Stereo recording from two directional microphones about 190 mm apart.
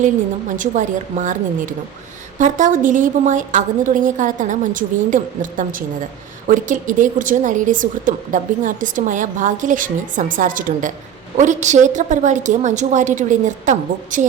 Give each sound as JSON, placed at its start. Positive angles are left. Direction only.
{"t": 0.5, "sound": "a woman's voice", "side_deg": -40}